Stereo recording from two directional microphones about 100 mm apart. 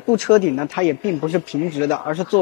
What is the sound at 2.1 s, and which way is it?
Speech, 10° left (ahead or behind).